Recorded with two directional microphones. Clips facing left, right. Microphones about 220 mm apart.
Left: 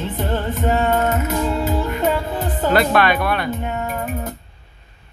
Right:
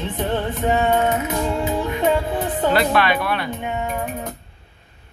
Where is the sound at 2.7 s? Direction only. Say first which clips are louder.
Left 5 dB; 45° left (ahead or behind).